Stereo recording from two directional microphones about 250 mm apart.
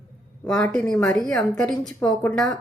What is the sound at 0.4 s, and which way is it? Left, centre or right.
Speech, centre.